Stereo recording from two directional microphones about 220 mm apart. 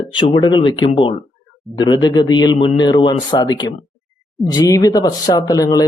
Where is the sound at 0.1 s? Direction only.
25° left (ahead or behind).